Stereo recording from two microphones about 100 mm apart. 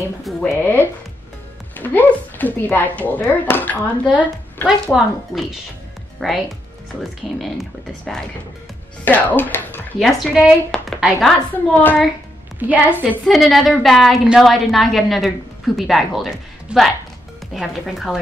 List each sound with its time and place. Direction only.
0.4 s speech: 20° left (ahead or behind)
4.9 s a woman's voice: 5° right (ahead or behind)
9.0 s speech: 15° left (ahead or behind)
9.9 s a woman's voice: centre (ahead or behind)
11.5 s speech: 15° left (ahead or behind)
12.5 s a woman's voice: 15° right (ahead or behind)
13.3 s a woman's voice: centre (ahead or behind)